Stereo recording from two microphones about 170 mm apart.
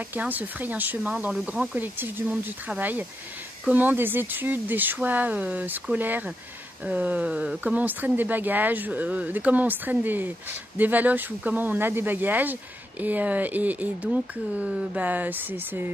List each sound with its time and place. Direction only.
0.1 s speech: 10° right (ahead or behind)